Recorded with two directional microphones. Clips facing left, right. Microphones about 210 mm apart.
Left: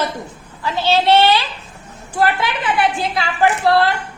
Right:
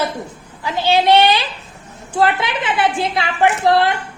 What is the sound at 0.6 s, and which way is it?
A woman's voice, 15° right (ahead or behind).